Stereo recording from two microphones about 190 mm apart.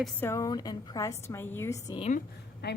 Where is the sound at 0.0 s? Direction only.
10° left (ahead or behind).